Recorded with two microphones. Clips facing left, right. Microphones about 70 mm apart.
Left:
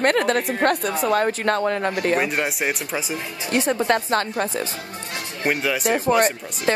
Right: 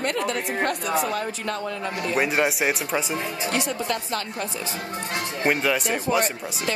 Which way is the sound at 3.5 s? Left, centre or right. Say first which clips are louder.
Left 9 dB; left.